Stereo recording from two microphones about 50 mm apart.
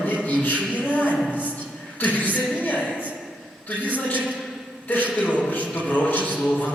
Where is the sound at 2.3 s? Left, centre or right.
Left.